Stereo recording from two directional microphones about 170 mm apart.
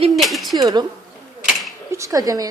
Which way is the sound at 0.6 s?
25° right (ahead or behind).